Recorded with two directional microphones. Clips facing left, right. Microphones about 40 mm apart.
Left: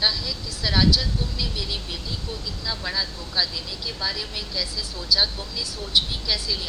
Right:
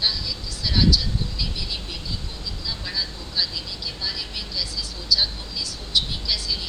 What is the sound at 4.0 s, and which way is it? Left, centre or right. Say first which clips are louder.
Speech: left 3 dB; left.